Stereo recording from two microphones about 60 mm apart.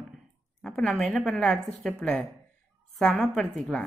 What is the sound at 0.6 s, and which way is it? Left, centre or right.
A woman's voice, centre.